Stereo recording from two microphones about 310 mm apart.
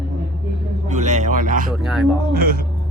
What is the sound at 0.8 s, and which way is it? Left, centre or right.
Speech, right.